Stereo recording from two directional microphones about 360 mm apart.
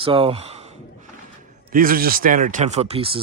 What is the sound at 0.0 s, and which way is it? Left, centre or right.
Speech, centre.